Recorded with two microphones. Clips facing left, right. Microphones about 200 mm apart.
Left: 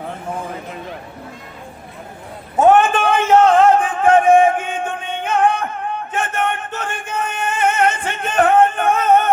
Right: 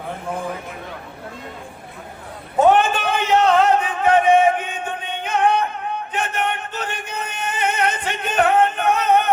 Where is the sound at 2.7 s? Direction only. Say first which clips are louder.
Left 4 dB; 50° left (ahead or behind).